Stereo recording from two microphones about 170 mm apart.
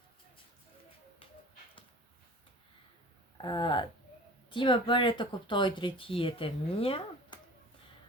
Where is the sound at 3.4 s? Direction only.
25° left (ahead or behind).